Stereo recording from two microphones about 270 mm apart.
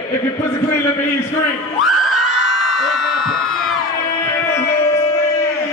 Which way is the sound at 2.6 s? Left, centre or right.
Centre.